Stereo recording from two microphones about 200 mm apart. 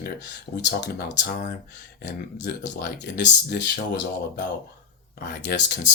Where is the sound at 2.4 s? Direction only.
55° left (ahead or behind).